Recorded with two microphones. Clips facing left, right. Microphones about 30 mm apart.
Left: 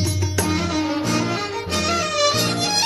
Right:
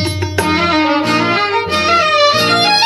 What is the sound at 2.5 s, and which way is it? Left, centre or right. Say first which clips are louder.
Music: right 11 dB; right.